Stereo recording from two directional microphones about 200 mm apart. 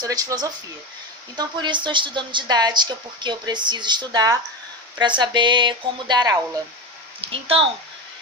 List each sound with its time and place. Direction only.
0.0 s a woman's voice: 15° right (ahead or behind)